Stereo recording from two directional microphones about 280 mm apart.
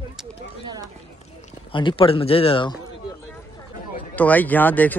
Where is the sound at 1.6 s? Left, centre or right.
Centre.